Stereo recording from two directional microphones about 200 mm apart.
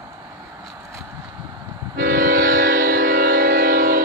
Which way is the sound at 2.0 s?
45° right (ahead or behind).